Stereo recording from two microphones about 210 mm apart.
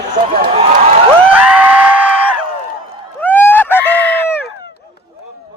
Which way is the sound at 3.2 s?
10° left (ahead or behind).